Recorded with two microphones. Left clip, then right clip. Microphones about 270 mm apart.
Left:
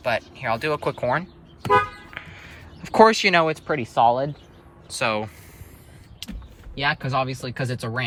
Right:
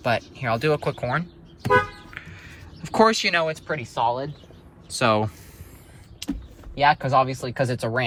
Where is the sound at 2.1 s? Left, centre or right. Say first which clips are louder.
Left 2 dB; centre.